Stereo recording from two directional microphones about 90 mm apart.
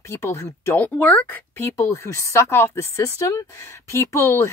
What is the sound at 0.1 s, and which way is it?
Speech, 30° left (ahead or behind).